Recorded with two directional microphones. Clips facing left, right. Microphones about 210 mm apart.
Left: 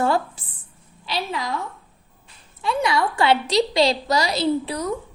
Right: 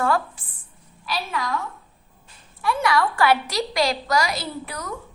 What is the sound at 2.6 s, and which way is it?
A woman's voice, 20° left (ahead or behind).